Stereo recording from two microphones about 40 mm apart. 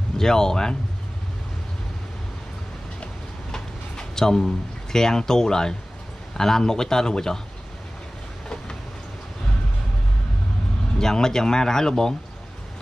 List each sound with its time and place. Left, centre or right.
0.2 s speech: centre
3.5 s a sound: centre
4.9 s speech: centre
11.0 s speech: centre